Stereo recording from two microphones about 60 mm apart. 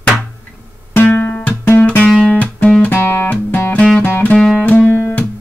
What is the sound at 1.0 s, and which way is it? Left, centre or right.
Music, left.